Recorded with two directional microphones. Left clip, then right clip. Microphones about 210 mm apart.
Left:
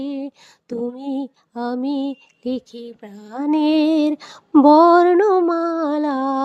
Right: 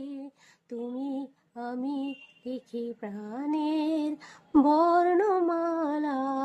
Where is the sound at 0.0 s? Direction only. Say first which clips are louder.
Left 13 dB; 40° left (ahead or behind).